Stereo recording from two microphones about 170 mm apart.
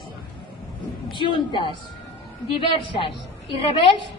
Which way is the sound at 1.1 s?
30° left (ahead or behind).